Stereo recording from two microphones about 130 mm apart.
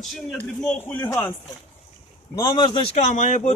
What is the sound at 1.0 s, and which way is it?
Speech, 15° left (ahead or behind).